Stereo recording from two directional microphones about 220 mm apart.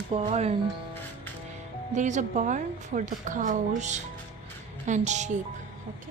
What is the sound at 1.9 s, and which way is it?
A woman's voice, 35° right (ahead or behind).